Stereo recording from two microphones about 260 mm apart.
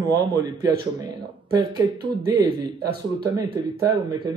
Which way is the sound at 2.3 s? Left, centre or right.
Centre.